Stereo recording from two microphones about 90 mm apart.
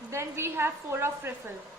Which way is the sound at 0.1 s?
30° right (ahead or behind).